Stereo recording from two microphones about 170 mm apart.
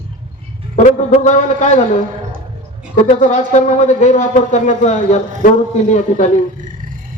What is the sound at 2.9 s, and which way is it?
Speech, 45° left (ahead or behind).